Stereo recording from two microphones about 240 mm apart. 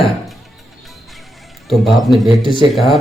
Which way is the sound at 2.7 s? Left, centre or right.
Centre.